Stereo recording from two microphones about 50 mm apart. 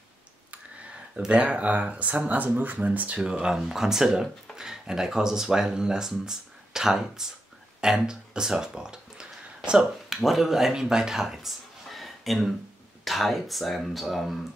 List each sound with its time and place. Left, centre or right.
1.3 s speech: right
3.2 s speech: centre
10.0 s speech: centre